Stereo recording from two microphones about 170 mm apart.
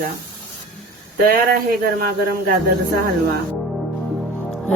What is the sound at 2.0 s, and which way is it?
Speech, 65° right (ahead or behind).